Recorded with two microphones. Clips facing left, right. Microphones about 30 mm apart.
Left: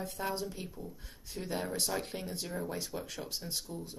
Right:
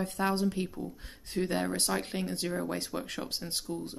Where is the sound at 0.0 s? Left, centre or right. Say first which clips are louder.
Right 7 dB; right.